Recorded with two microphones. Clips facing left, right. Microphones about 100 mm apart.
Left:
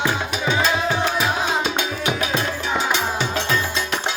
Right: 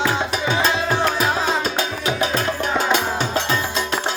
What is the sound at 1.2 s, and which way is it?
Music, 40° right (ahead or behind).